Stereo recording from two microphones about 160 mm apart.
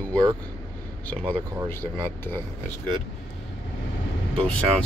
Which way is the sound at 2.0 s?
15° left (ahead or behind).